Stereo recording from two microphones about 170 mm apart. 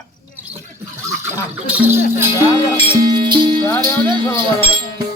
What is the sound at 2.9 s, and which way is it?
Speech, 25° right (ahead or behind).